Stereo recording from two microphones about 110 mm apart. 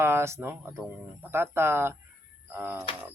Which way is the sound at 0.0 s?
25° right (ahead or behind).